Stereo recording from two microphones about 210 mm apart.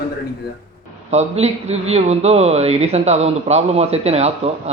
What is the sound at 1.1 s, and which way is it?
Speech, 30° right (ahead or behind).